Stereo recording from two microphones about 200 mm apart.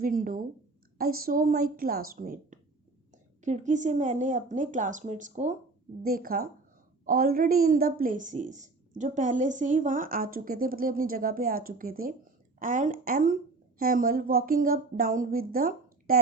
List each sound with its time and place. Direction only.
0.0 s a woman's voice: 45° right (ahead or behind)